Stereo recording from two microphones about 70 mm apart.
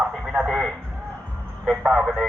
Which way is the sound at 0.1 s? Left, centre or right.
Centre.